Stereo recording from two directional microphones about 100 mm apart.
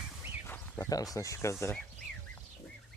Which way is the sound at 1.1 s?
30° left (ahead or behind).